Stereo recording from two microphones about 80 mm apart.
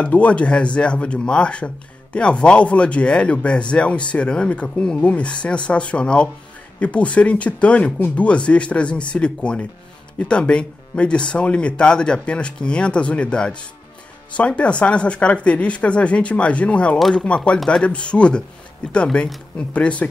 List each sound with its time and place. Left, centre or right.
0.0 s speech: centre